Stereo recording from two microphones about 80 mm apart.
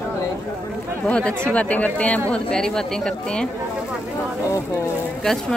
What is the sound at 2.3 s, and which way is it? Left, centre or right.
Speech, centre.